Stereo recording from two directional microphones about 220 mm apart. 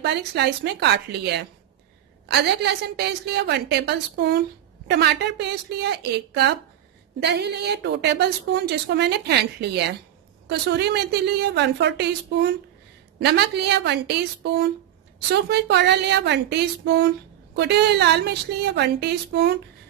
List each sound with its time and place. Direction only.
0.0 s a woman's voice: 50° right (ahead or behind)